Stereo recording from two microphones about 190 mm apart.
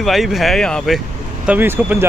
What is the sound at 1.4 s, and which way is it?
Speech, 10° right (ahead or behind).